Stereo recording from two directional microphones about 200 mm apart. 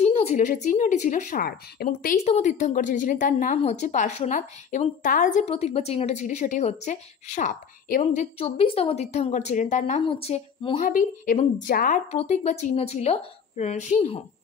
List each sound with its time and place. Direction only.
0.0 s a woman's voice: 30° left (ahead or behind); by 2.1 s 50° left (ahead or behind)
2.2 s a woman's voice: 35° left (ahead or behind)
10.8 s a woman's voice: 45° left (ahead or behind)
12.1 s a woman's voice: 35° left (ahead or behind)